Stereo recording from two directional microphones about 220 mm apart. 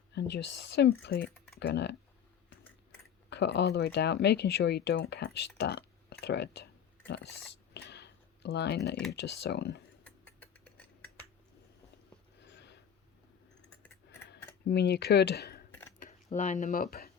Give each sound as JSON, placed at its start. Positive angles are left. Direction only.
{"t": 0.1, "sound": "speech", "side_deg": 50}
{"t": 3.2, "sound": "speech", "side_deg": 50}
{"t": 7.7, "sound": "computer keyboard", "side_deg": 50}
{"t": 9.1, "sound": "speech", "side_deg": 50}
{"t": 10.0, "sound": "rodents", "side_deg": 5}
{"t": 12.4, "sound": "a sound", "side_deg": 50}
{"t": 14.7, "sound": "speech", "side_deg": 50}
{"t": 16.0, "sound": "speech", "side_deg": 35}